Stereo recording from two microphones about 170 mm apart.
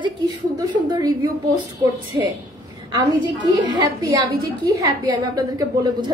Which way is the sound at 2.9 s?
25° right (ahead or behind).